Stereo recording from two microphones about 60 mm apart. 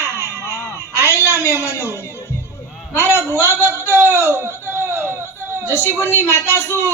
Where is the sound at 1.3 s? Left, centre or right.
Left.